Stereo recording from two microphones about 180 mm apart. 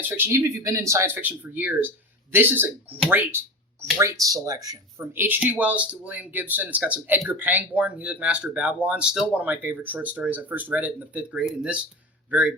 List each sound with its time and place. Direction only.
0.0 s speech: 15° right (ahead or behind)
3.1 s a sound: 10° right (ahead or behind)
3.9 s speech: 20° right (ahead or behind)